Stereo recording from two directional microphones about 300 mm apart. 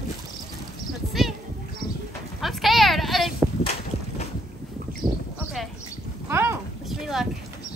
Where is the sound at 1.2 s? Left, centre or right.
Centre.